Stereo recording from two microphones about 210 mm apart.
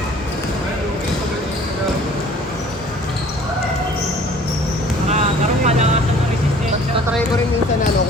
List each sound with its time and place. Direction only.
5.6 s vehicle: 30° right (ahead or behind)